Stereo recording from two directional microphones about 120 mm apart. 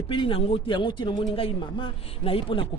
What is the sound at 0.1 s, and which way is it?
Speech, 50° left (ahead or behind).